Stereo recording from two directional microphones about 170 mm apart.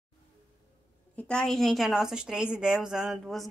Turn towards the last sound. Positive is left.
turn(degrees=0)  # may be behind; listen again after turning